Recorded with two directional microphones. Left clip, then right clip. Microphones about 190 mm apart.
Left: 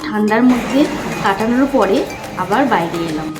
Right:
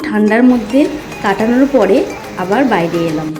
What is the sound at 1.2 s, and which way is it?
Speech, 20° right (ahead or behind).